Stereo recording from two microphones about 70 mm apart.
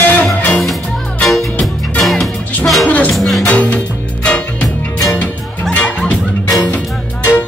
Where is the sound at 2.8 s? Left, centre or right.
Left.